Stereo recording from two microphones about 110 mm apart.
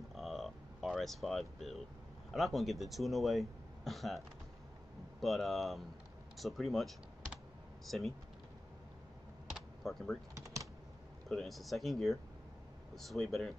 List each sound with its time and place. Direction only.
0.1 s a sound: centre (ahead or behind)
2.3 s speech: centre (ahead or behind)
5.2 s speech: centre (ahead or behind)
9.5 s typing: centre (ahead or behind)
10.3 s typing: 30° right (ahead or behind)
11.2 s speech: 5° left (ahead or behind)